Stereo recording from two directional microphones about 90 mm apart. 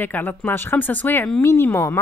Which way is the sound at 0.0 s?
20° left (ahead or behind).